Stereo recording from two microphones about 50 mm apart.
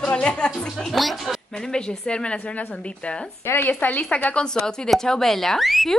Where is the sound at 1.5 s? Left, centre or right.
Centre.